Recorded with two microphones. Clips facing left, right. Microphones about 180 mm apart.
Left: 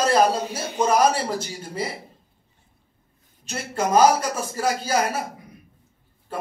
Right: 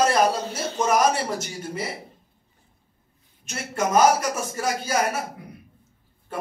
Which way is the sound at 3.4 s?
30° left (ahead or behind).